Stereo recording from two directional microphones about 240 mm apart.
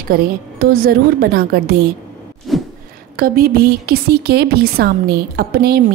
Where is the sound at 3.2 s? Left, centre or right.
Right.